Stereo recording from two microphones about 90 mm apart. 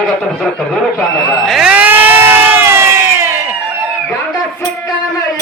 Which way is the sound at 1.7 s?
20° right (ahead or behind).